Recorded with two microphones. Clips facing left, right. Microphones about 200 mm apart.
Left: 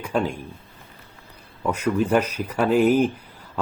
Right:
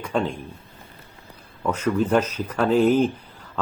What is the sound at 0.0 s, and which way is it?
Speech, 5° left (ahead or behind).